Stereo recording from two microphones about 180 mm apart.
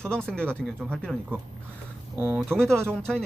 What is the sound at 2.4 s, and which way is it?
Speech, 5° left (ahead or behind).